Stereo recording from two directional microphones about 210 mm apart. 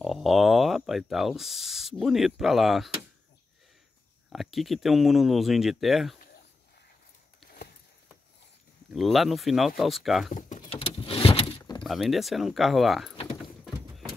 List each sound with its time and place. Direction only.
0.0 s speech: centre (ahead or behind)
4.3 s speech: centre (ahead or behind)
8.9 s speech: centre (ahead or behind)
10.3 s power windows: 35° left (ahead or behind)
10.9 s vehicle: 25° left (ahead or behind)
11.8 s speech: centre (ahead or behind)
13.1 s power windows: 25° left (ahead or behind)
13.7 s a sound: centre (ahead or behind)